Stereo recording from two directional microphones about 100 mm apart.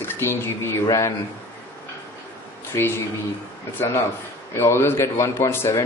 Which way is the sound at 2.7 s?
25° left (ahead or behind).